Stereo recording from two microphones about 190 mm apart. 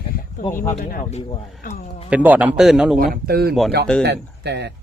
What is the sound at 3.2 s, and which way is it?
Speech, 55° right (ahead or behind).